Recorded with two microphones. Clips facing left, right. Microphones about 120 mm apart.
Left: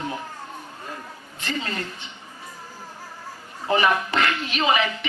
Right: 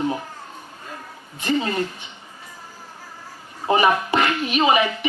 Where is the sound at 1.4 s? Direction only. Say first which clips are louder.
Right 7 dB; 20° right (ahead or behind).